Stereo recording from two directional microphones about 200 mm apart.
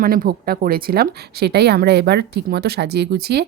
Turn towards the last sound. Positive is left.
turn(degrees=-55)  # may be behind; listen again after turning